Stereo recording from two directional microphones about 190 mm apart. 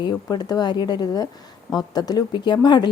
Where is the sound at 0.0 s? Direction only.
20° left (ahead or behind).